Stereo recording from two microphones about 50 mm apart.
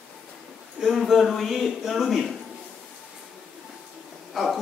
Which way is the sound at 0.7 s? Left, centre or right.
Centre.